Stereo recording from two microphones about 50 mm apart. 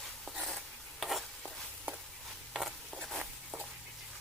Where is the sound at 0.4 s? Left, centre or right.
Centre.